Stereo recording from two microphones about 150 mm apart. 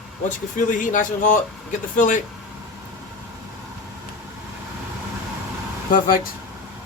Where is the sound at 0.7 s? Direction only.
60° left (ahead or behind).